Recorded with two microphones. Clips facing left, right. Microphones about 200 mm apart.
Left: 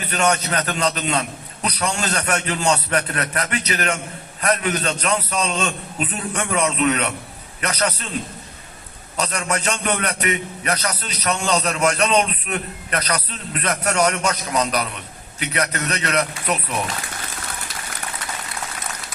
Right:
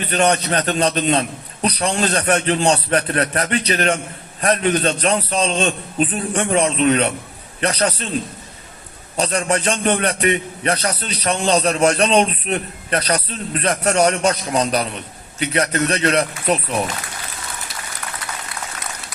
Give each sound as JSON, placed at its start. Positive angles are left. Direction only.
{"t": 0.1, "sound": "a man's voice", "side_deg": -30}
{"t": 9.1, "sound": "a man's voice", "side_deg": -30}